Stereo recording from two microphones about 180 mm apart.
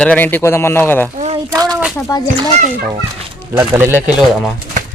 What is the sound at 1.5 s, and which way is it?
Speech, 20° right (ahead or behind).